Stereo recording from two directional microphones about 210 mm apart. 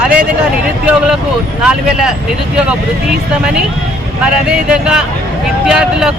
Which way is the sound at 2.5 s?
5° right (ahead or behind).